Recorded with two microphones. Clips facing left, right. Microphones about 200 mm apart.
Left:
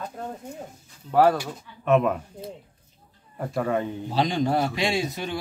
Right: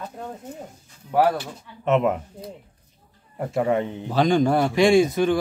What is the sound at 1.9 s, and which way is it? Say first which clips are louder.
Speech: right 1 dB; 20° right (ahead or behind).